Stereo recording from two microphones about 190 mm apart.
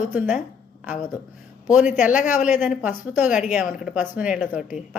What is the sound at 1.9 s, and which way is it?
Speech, 5° right (ahead or behind).